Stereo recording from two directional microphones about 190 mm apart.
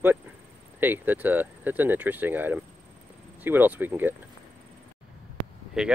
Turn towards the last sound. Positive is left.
turn(degrees=-5)  # may be behind; listen again after turning